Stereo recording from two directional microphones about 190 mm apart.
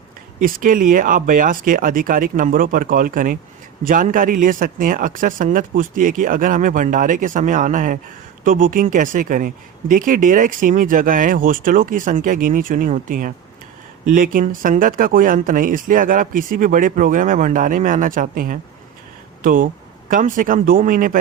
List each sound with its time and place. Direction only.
0.3 s speech: 45° right (ahead or behind)